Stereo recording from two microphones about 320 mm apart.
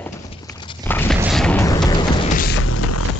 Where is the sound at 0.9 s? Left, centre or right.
Centre.